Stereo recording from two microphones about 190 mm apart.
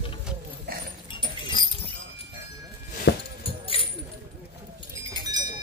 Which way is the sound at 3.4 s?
30° left (ahead or behind).